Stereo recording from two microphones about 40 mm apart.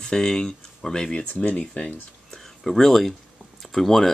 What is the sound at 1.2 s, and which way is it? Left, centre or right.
Speech, left.